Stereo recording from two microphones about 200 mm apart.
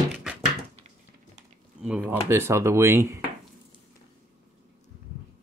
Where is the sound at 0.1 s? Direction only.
5° right (ahead or behind).